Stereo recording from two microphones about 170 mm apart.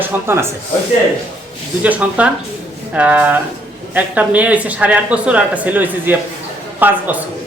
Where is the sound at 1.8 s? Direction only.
10° right (ahead or behind).